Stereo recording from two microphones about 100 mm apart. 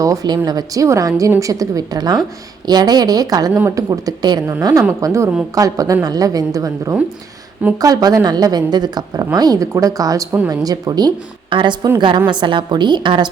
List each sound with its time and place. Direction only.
0.0 s a woman's voice: 35° right (ahead or behind)